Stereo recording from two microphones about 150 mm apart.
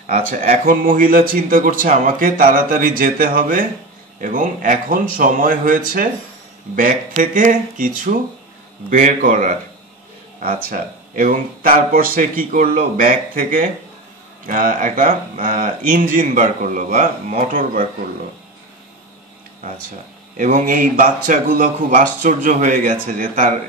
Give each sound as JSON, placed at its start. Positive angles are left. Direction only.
{"t": 0.0, "sound": "a man's voice", "side_deg": -60}
{"t": 10.4, "sound": "a man's voice", "side_deg": -75}
{"t": 20.3, "sound": "a man's voice", "side_deg": -65}